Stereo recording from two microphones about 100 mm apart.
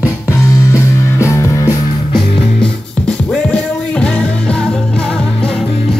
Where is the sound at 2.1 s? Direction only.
10° left (ahead or behind).